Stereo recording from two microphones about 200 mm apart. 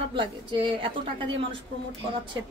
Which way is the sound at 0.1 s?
25° right (ahead or behind).